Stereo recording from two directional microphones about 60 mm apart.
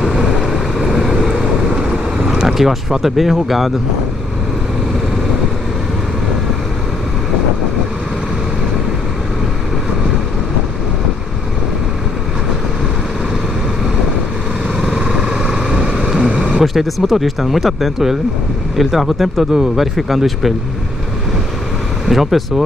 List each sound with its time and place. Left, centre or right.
0.0 s vehicle: centre
2.2 s speech: centre
14.8 s vehicle: centre
16.3 s vehicle: right
16.5 s speech: centre
22.0 s speech: centre